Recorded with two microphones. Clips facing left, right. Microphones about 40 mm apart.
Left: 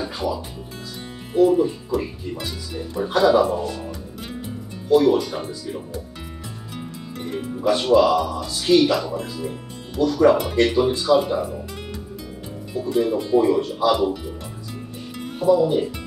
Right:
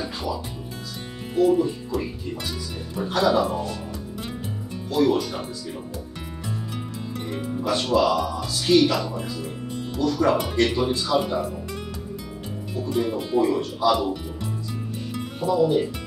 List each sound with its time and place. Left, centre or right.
0.0 s music: centre
1.3 s speech: centre
4.8 s speech: centre
7.2 s speech: centre
13.4 s music: centre
15.4 s speech: centre